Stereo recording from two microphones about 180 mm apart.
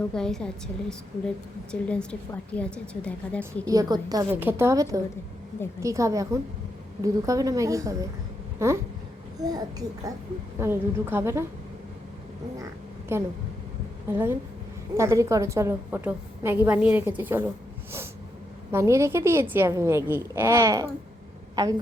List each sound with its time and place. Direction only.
0.1 s a woman's voice: 5° left (ahead or behind)
3.7 s a woman's voice: 20° right (ahead or behind)
13.1 s a woman's voice: 15° right (ahead or behind)
18.7 s a woman's voice: 15° right (ahead or behind)